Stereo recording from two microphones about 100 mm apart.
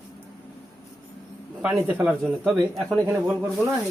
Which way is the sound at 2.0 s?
5° right (ahead or behind).